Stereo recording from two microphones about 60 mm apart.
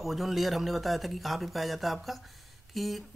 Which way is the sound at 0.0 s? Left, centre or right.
Centre.